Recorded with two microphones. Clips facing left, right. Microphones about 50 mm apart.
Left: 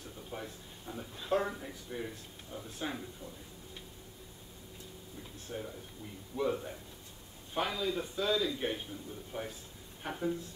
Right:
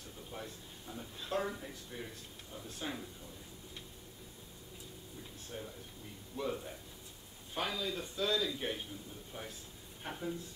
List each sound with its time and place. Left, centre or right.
0.3 s speech: centre
5.5 s speech: centre